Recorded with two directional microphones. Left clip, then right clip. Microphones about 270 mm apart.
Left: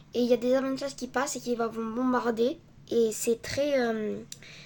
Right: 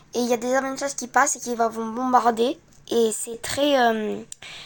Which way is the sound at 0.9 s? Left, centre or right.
Left.